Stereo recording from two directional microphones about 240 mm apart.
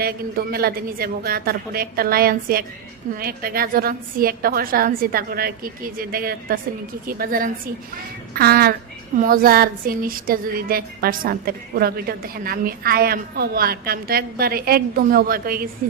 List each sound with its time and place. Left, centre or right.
0.0 s a woman's voice: right